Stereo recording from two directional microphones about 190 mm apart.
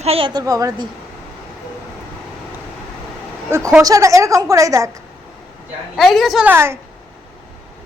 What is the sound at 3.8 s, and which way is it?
A woman's voice, 15° right (ahead or behind).